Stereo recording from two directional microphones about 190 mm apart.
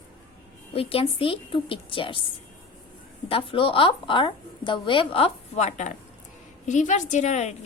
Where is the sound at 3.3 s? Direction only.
30° left (ahead or behind).